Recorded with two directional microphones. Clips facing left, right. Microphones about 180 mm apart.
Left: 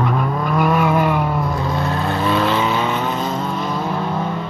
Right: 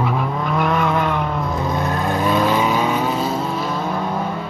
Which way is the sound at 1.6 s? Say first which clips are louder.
Even; 20° right (ahead or behind).